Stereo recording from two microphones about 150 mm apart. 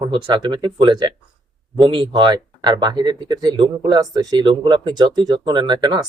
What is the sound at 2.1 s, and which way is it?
Speech, 30° right (ahead or behind).